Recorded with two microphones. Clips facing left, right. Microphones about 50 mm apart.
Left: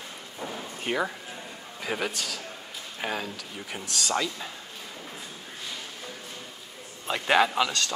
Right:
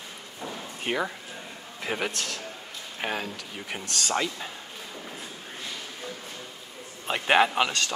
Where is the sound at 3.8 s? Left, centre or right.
Centre.